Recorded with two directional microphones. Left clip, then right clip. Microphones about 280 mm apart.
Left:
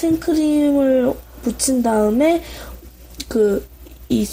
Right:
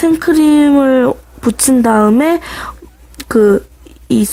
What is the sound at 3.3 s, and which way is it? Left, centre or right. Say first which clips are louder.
Speech: right 7 dB; right.